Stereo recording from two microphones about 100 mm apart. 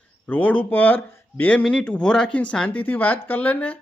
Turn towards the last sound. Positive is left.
turn(degrees=20)  # may be behind; listen again after turning